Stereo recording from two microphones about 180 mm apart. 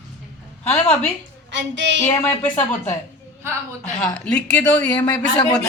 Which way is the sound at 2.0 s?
10° left (ahead or behind).